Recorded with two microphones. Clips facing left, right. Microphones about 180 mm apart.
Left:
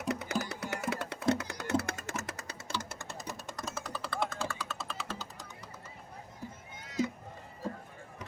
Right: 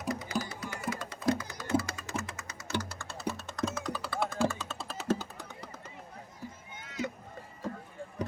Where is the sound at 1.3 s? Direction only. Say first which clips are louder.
Right 1 dB; 70° left (ahead or behind); by 2.7 s 35° left (ahead or behind).